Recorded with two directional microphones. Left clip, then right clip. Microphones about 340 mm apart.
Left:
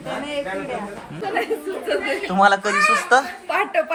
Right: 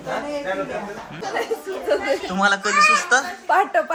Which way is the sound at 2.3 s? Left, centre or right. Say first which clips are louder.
Left 2 dB; centre.